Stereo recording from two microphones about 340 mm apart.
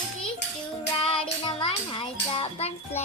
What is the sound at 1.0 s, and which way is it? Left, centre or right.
Child singing, centre.